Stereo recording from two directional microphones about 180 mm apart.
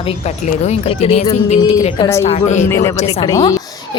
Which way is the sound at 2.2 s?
40° left (ahead or behind).